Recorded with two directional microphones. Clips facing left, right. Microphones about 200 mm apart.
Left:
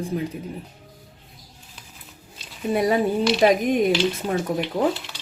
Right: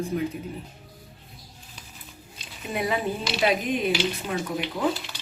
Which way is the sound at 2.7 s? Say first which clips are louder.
Left 7 dB; 40° left (ahead or behind).